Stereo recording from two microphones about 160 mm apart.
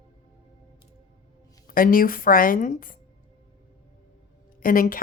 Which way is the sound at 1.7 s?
60° left (ahead or behind).